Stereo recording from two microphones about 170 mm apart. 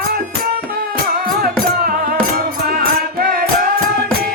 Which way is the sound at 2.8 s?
60° right (ahead or behind).